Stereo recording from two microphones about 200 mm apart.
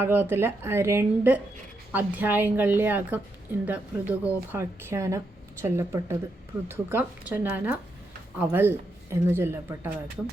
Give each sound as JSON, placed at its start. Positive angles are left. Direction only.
{"t": 0.0, "sound": "speech", "side_deg": -10}